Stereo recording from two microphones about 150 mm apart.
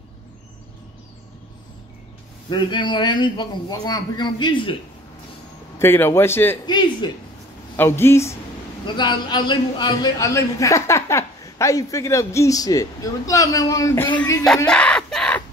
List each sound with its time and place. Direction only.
2.5 s a man's voice: 30° left (ahead or behind)
5.8 s a man's voice: 15° left (ahead or behind)
6.6 s a man's voice: 30° left (ahead or behind)
7.7 s a man's voice: 15° left (ahead or behind)
8.8 s a man's voice: 30° left (ahead or behind); by 14.2 s 15° left (ahead or behind)
14.7 s a sound: 5° left (ahead or behind)